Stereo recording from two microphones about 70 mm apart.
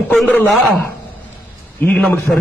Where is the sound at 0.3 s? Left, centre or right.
Left.